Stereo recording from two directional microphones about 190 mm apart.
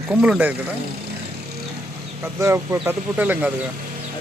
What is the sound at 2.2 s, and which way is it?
Speech, 15° right (ahead or behind).